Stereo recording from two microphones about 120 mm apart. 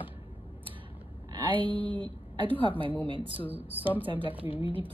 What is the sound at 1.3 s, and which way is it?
Speech, 45° right (ahead or behind).